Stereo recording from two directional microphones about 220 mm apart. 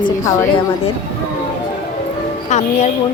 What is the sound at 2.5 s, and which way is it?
Speech, 30° left (ahead or behind).